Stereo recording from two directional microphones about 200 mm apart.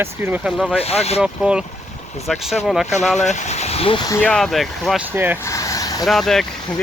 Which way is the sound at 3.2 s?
35° left (ahead or behind).